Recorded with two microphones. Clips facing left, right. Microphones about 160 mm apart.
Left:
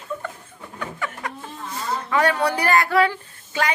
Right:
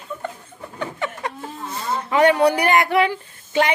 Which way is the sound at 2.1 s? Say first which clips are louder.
Right 6 dB; 20° right (ahead or behind).